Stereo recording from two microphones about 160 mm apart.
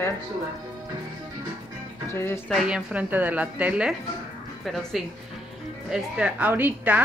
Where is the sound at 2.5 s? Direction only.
5° right (ahead or behind).